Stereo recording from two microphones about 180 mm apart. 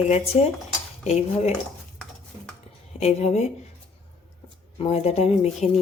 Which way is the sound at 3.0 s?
40° left (ahead or behind).